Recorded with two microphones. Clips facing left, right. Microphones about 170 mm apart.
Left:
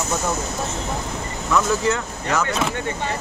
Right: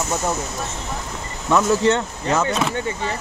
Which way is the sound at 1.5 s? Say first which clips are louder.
Right 3 dB; 30° right (ahead or behind).